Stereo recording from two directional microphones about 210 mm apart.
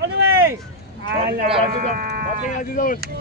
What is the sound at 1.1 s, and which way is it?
Speech, 50° right (ahead or behind).